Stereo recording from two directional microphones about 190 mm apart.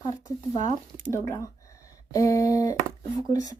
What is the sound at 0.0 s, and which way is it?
Speech, 20° left (ahead or behind).